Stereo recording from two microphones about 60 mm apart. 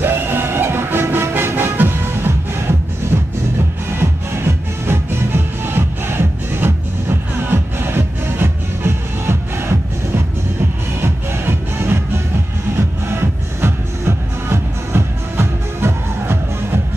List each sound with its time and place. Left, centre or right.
0.0 s music: right